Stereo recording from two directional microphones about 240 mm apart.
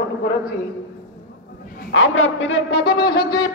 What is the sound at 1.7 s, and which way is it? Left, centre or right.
A man's voice, left.